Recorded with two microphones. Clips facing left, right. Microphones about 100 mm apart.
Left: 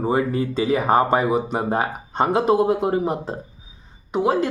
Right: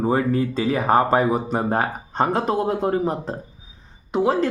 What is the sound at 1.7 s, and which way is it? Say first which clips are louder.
Speech: even; 5° left (ahead or behind).